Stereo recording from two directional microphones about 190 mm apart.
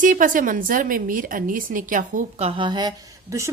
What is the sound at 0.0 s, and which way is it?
A woman's voice, 45° right (ahead or behind).